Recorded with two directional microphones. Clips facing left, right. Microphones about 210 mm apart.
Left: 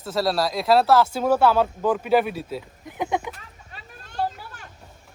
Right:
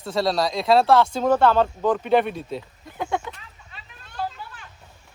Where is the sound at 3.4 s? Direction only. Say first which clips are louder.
Left 2 dB; 45° left (ahead or behind).